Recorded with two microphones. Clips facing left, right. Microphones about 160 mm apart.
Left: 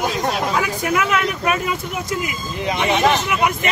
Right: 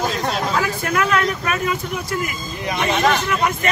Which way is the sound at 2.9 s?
20° left (ahead or behind).